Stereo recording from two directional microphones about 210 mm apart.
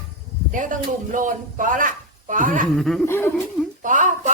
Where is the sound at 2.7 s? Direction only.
Centre (ahead or behind).